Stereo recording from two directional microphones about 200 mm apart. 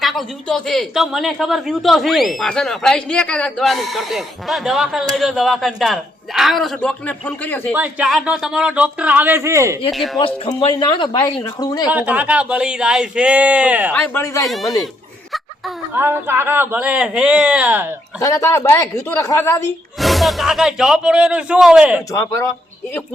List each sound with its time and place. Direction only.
0.0 s a man's voice: centre (ahead or behind)
7.7 s a man's voice: 5° right (ahead or behind)
9.9 s a man's voice: centre (ahead or behind)
10.2 s speech: 25° left (ahead or behind)
11.9 s speech: 10° right (ahead or behind)
13.9 s speech: 10° left (ahead or behind)
16.0 s speech: 10° right (ahead or behind)
18.2 s speech: 15° left (ahead or behind)
20.0 s a man's voice: centre (ahead or behind)
22.1 s speech: 15° left (ahead or behind)